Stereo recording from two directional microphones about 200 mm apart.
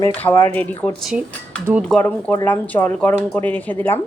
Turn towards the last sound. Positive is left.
turn(degrees=10)  # may be behind; listen again after turning